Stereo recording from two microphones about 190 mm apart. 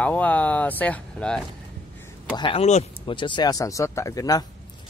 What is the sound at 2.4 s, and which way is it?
Speech, 30° left (ahead or behind).